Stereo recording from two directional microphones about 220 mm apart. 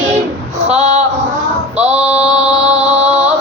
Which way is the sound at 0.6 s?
30° right (ahead or behind).